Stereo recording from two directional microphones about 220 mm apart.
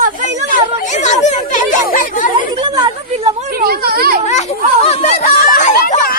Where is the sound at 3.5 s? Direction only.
45° right (ahead or behind).